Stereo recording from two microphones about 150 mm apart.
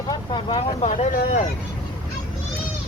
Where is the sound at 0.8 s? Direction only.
50° left (ahead or behind).